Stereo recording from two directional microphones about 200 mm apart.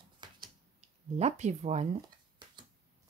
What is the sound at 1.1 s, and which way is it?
Speech, 35° right (ahead or behind).